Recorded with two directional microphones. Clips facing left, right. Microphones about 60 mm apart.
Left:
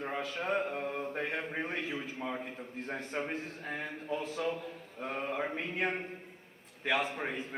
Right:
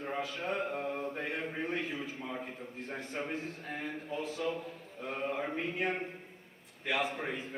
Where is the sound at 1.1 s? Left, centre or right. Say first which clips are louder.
Left 2 dB; left.